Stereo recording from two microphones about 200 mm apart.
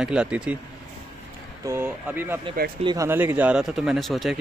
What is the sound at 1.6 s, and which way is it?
Speech, 10° right (ahead or behind).